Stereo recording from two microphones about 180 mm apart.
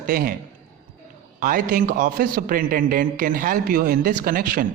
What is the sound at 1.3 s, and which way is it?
A man's voice, 45° right (ahead or behind).